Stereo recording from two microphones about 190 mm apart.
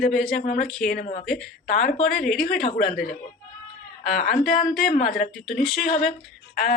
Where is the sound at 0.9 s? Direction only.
50° left (ahead or behind).